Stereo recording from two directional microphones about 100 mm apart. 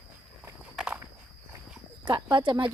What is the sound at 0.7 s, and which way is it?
Walk, 10° right (ahead or behind).